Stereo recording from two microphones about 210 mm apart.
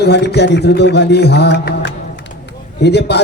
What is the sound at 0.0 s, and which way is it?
A man's voice, 50° left (ahead or behind).